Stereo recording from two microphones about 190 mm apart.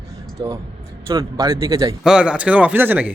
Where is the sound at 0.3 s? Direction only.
20° right (ahead or behind).